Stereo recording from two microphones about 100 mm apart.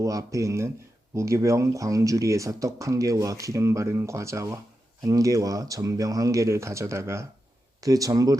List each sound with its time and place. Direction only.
0.0 s speech: 35° right (ahead or behind)